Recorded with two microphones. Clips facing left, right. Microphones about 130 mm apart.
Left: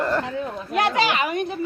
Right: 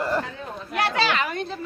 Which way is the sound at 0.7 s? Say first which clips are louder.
Left 2 dB; 20° left (ahead or behind).